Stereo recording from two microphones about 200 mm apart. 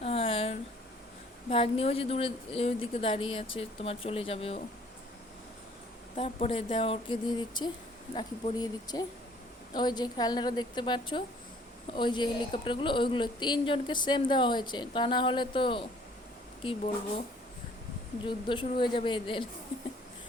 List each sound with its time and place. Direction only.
0.0 s a sound: 30° left (ahead or behind)
1.5 s speech: 30° left (ahead or behind)
6.1 s speech: 30° left (ahead or behind)
18.2 s speech: 25° left (ahead or behind)